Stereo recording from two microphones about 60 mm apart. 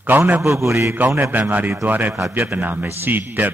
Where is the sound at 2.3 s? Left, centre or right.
Right.